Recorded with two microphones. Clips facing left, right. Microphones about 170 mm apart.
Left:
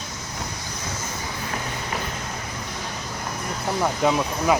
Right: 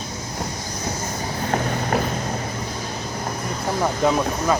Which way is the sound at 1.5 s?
50° right (ahead or behind).